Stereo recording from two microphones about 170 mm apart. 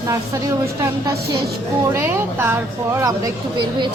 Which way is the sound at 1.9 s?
15° right (ahead or behind).